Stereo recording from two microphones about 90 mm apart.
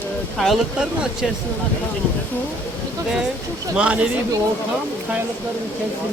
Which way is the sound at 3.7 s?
15° right (ahead or behind).